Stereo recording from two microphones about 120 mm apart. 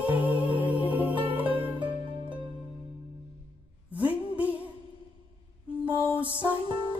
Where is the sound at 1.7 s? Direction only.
45° right (ahead or behind).